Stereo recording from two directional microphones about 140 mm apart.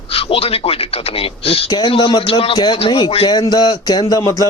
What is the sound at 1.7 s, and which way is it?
Speech, 35° left (ahead or behind).